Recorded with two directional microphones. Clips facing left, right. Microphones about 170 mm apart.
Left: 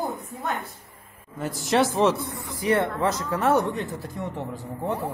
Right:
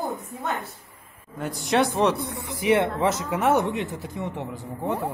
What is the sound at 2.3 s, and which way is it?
Speech, 20° right (ahead or behind).